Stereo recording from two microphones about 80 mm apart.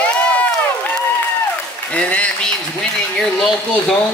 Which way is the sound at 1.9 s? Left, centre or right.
Centre.